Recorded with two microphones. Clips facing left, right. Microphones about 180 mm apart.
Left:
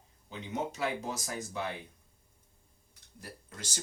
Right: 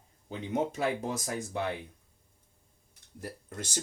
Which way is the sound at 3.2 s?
50° right (ahead or behind).